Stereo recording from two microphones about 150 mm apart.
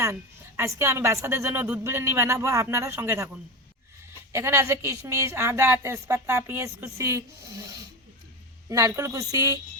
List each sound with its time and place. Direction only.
0.0 s speech: 20° right (ahead or behind)
4.3 s speech: 15° right (ahead or behind)